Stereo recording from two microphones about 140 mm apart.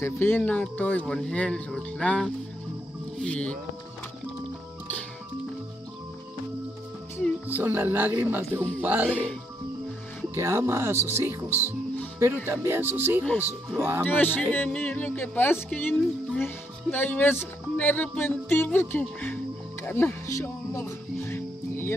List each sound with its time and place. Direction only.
0.0 s speech: 15° left (ahead or behind)
3.2 s music: 10° left (ahead or behind)
7.4 s speech: 15° right (ahead or behind)
9.1 s speech: 10° left (ahead or behind)
10.3 s speech: 20° right (ahead or behind)
14.0 s speech: 15° left (ahead or behind)